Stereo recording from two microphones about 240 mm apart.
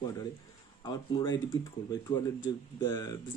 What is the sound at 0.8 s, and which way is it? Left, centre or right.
Speech, centre.